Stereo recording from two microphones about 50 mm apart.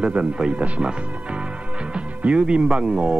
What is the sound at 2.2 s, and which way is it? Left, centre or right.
Speech, right.